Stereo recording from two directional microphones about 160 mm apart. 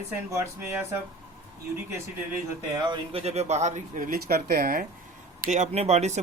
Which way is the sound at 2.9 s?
40° right (ahead or behind).